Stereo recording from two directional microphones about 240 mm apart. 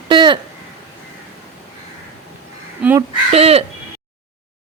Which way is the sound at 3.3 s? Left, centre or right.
Right.